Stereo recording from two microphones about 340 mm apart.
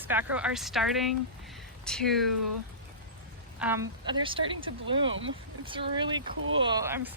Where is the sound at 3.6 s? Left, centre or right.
Centre.